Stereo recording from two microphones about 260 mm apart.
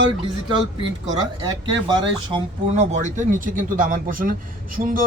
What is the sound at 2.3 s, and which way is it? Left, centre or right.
Speech, right.